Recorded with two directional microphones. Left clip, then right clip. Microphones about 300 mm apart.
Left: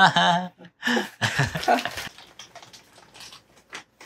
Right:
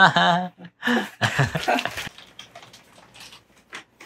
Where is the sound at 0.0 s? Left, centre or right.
Centre.